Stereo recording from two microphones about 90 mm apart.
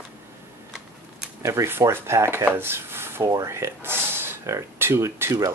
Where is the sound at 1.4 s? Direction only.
30° right (ahead or behind).